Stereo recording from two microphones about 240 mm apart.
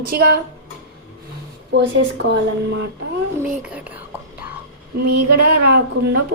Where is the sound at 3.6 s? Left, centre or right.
Centre.